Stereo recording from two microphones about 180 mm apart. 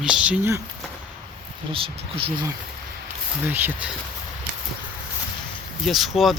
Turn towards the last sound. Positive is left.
turn(degrees=0)  # may be behind; listen again after turning